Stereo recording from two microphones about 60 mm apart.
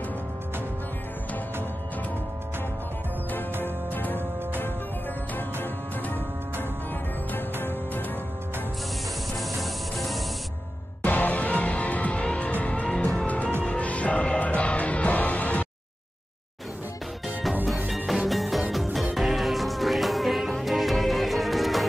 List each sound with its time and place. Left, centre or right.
3.6 s music: left
9.4 s spray: centre
11.0 s music: left
17.8 s music: centre